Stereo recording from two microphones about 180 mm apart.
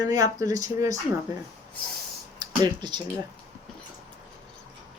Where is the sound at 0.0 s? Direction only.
20° right (ahead or behind).